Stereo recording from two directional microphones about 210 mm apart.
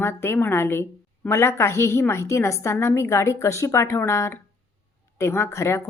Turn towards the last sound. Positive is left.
turn(degrees=15)  # may be behind; listen again after turning